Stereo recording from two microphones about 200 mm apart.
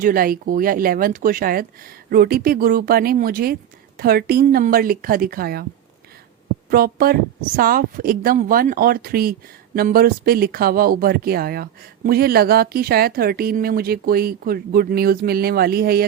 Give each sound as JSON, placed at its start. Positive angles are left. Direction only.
{"t": 0.0, "sound": "speech", "side_deg": -45}
{"t": 6.7, "sound": "speech", "side_deg": -50}